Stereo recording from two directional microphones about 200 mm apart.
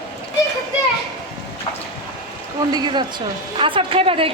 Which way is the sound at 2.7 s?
20° right (ahead or behind).